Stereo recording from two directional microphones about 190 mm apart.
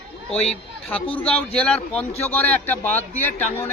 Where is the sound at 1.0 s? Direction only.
30° left (ahead or behind).